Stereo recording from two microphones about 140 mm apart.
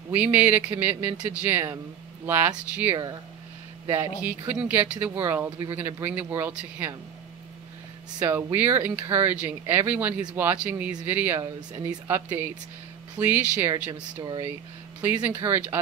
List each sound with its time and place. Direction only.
0.1 s speech: 10° right (ahead or behind)
8.3 s speech: 15° right (ahead or behind)
13.2 s speech: 15° right (ahead or behind)
13.9 s speech: 30° right (ahead or behind)
15.2 s speech: 15° right (ahead or behind)